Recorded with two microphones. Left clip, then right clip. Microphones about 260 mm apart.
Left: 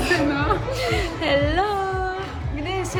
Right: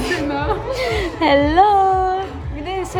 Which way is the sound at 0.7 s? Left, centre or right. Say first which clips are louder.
Right 4 dB; right.